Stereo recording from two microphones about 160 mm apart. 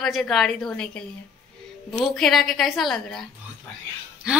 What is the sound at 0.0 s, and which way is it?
A woman's voice, centre (ahead or behind).